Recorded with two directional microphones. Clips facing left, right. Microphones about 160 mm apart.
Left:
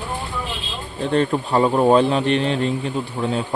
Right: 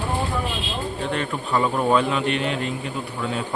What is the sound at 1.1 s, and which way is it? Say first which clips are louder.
A man's voice: left 9 dB; 35° left (ahead or behind).